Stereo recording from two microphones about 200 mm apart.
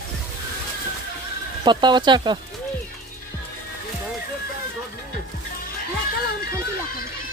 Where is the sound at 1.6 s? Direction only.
20° right (ahead or behind).